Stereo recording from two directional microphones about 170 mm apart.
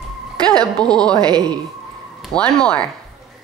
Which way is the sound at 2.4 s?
5° left (ahead or behind).